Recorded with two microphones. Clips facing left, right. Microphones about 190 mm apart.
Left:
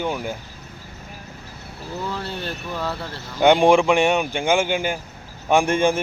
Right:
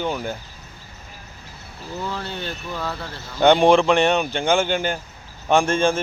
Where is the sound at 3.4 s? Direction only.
10° left (ahead or behind).